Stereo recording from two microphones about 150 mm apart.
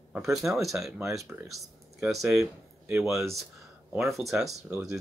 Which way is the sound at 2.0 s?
Centre (ahead or behind).